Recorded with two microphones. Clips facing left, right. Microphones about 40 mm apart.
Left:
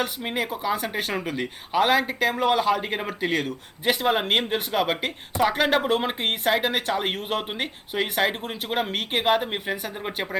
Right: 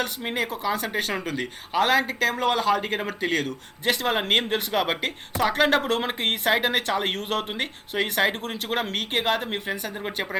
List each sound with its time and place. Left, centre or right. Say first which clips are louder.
0.0 s speech: even; centre